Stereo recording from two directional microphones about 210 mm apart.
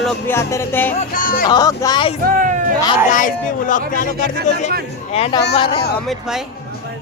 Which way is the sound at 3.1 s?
40° left (ahead or behind).